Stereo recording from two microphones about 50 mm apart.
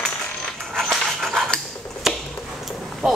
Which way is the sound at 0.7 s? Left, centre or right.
Centre.